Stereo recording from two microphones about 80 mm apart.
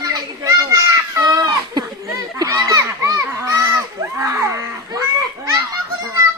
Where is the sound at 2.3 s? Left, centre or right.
Right.